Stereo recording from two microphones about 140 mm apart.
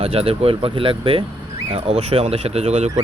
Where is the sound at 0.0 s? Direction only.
45° right (ahead or behind).